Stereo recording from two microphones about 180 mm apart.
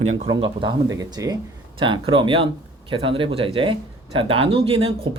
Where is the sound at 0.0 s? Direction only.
35° right (ahead or behind).